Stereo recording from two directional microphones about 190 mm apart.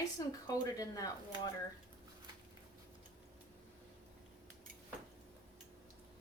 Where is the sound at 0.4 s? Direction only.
20° left (ahead or behind).